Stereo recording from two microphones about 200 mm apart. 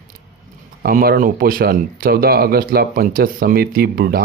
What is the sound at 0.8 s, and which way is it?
Speech, 50° right (ahead or behind).